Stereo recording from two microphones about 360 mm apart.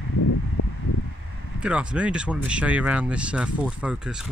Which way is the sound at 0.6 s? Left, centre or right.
Left.